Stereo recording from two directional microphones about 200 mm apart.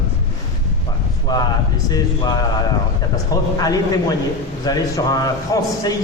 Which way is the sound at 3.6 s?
20° left (ahead or behind).